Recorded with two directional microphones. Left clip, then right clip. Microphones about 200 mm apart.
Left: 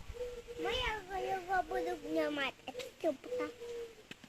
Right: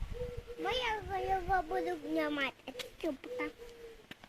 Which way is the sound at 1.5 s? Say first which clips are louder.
Right 2 dB; 30° right (ahead or behind).